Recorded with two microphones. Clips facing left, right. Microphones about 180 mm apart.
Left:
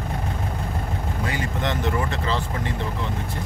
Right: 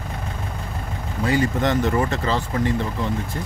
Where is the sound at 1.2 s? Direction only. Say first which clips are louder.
Right 8 dB; 40° right (ahead or behind).